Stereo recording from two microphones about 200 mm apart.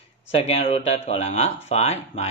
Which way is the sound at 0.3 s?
30° left (ahead or behind).